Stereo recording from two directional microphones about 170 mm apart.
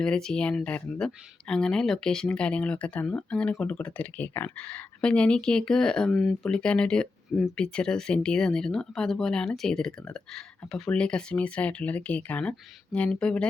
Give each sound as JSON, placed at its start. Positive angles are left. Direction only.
{"t": 0.0, "sound": "speech", "side_deg": 5}